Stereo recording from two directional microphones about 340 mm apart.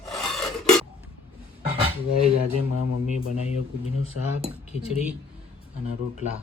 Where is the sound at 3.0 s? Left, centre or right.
Centre.